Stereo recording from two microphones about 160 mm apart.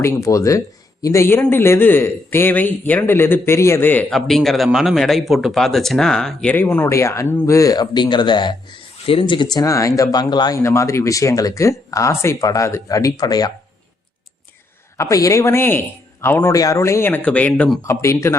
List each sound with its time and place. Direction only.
0.0 s a man's voice: 20° left (ahead or behind)
4.1 s speech: centre (ahead or behind); by 13.5 s 25° left (ahead or behind)
14.9 s a man's voice: 20° left (ahead or behind)